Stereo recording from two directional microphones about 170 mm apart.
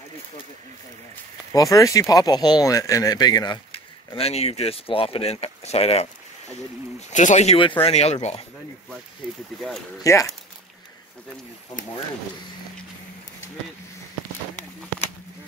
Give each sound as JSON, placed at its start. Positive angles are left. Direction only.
{"t": 1.5, "sound": "speech", "side_deg": 20}
{"t": 4.1, "sound": "speech", "side_deg": 35}
{"t": 7.1, "sound": "speech", "side_deg": 45}
{"t": 10.1, "sound": "speech", "side_deg": 20}